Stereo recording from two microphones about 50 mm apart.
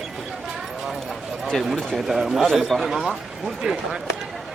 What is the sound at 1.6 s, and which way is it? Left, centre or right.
A man's voice, centre.